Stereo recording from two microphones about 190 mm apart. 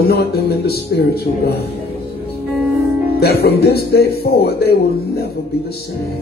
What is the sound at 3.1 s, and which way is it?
Speech, 55° left (ahead or behind).